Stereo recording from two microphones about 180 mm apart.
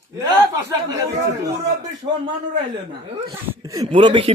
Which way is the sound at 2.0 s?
30° right (ahead or behind).